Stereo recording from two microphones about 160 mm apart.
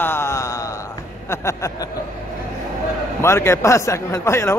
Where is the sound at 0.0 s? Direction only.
15° left (ahead or behind).